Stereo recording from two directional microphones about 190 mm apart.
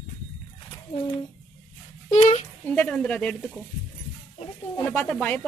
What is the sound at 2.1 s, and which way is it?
Speech, 35° left (ahead or behind).